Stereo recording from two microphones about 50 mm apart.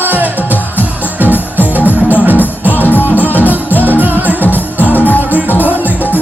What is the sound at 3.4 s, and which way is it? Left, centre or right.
Music, right.